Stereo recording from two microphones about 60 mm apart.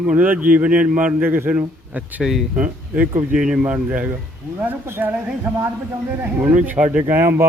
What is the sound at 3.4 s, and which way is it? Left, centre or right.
Speech, centre.